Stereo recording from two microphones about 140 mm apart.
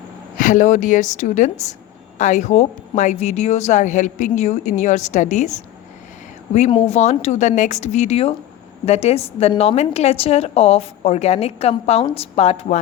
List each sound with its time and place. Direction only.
0.3 s speech: 70° left (ahead or behind)
6.7 s a woman's voice: 45° left (ahead or behind)